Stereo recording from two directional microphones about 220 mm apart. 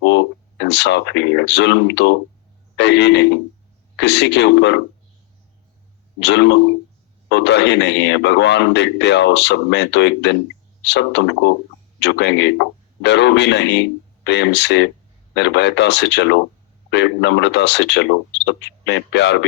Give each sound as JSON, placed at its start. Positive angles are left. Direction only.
{"t": 0.6, "sound": "a man's voice", "side_deg": 50}
{"t": 6.1, "sound": "a man's voice", "side_deg": 50}